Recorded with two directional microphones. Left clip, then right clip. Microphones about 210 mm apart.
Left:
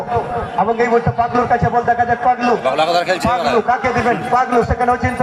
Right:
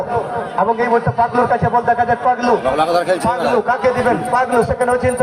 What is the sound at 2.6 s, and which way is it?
A man's voice, 45° right (ahead or behind).